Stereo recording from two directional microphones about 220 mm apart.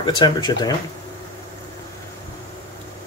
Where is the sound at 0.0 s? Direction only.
20° left (ahead or behind).